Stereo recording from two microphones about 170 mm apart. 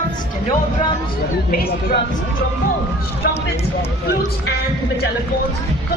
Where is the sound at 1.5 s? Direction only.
65° left (ahead or behind).